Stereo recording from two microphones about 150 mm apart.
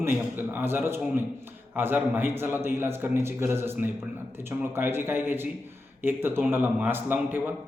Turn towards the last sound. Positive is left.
turn(degrees=-15)  # may be behind; listen again after turning